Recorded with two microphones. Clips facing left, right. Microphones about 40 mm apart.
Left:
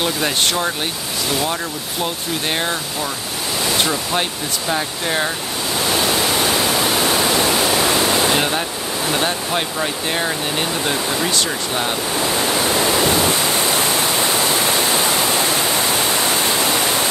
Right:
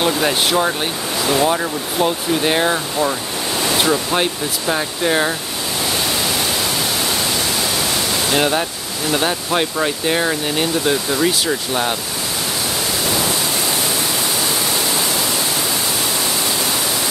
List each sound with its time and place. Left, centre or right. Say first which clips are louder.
0.0 s speech: right 2 dB; centre
3.8 s speech: right 3 dB; centre
8.4 s speech: right 2 dB; centre
14.5 s waterfall: left 2 dB; left